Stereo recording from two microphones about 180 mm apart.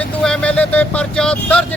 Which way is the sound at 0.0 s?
5° left (ahead or behind).